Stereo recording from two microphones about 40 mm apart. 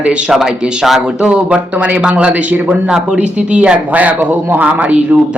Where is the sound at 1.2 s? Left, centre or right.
Right.